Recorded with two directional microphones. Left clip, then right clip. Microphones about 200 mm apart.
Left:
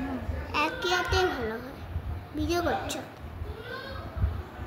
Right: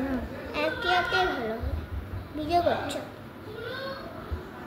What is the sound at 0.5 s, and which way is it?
Children playing, 45° left (ahead or behind).